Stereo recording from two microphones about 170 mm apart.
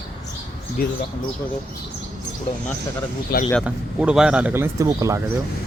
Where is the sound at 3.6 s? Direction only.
5° right (ahead or behind).